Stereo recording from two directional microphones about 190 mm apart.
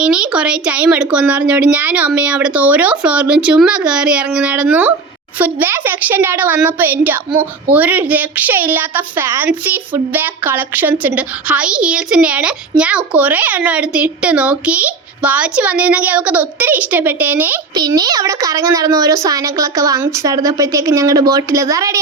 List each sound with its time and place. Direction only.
0.0 s a woman's voice: 5° right (ahead or behind)
17.7 s a woman's voice: 20° right (ahead or behind)